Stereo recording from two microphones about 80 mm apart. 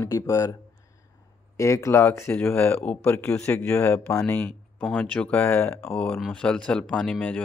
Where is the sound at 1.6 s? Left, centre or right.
Left; by 3.2 s centre.